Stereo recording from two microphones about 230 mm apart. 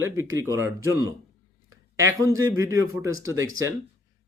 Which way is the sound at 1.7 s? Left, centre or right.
Centre.